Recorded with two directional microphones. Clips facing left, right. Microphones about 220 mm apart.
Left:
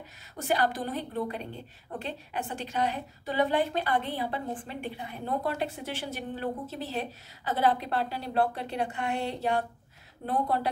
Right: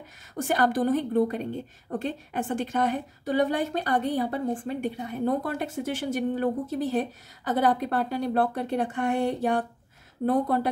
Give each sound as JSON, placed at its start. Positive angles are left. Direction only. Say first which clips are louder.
{"t": 0.3, "sound": "a woman's voice", "louder": "right 4 dB", "side_deg": -50}